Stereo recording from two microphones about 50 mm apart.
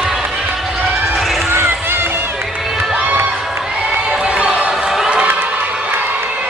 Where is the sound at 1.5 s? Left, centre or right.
Right.